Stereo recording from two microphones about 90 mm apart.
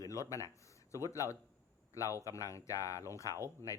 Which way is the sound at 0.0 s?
35° left (ahead or behind).